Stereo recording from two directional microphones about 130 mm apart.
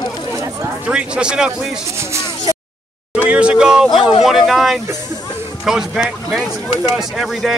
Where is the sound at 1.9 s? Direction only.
20° right (ahead or behind).